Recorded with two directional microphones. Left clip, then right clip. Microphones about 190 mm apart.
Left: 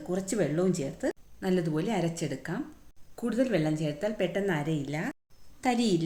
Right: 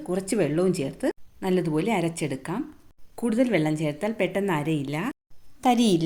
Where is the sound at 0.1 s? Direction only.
30° right (ahead or behind).